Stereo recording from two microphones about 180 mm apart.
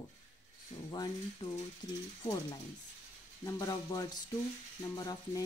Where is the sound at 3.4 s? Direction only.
20° left (ahead or behind).